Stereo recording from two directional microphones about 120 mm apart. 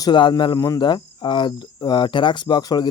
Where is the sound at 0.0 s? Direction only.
40° left (ahead or behind).